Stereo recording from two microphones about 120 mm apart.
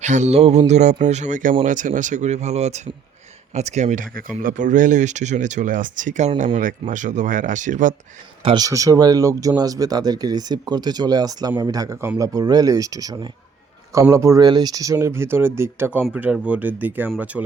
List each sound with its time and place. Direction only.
0.0 s mantra: 80° right; by 0.6 s 60° right (ahead or behind)
0.7 s speech: 75° right (ahead or behind); by 7.9 s 90° right
8.5 s speech: 30° right (ahead or behind); by 17.4 s 10° right (ahead or behind)